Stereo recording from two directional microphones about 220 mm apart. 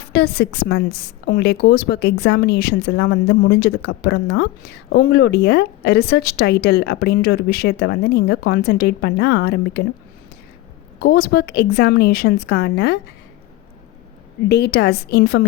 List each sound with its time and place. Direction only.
0.1 s a woman's voice: 50° left (ahead or behind)
11.0 s a woman's voice: 45° left (ahead or behind)
14.4 s a woman's voice: 50° left (ahead or behind)